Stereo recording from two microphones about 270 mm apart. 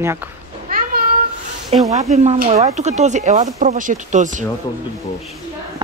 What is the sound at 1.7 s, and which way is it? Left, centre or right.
Speech, right.